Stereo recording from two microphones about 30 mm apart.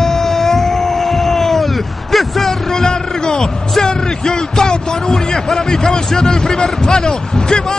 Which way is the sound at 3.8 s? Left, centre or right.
Left.